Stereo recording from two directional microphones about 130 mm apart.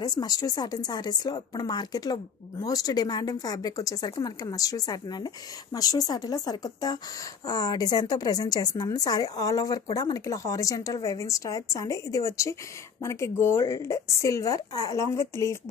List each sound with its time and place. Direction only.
0.0 s a woman's voice: 30° left (ahead or behind)